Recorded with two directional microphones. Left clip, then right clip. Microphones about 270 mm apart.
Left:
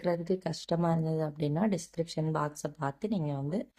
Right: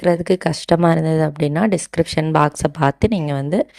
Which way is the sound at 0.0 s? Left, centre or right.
Right.